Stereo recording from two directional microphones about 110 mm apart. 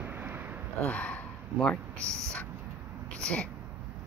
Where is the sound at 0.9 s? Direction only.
10° left (ahead or behind).